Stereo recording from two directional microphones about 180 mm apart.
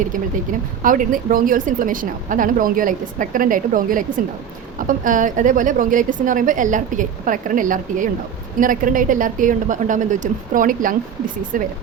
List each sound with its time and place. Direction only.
0.8 s speech: 50° right (ahead or behind)